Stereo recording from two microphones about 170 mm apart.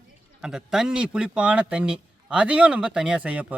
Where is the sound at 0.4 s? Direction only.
5° right (ahead or behind).